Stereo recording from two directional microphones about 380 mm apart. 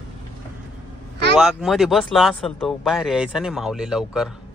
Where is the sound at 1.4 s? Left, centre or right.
Centre.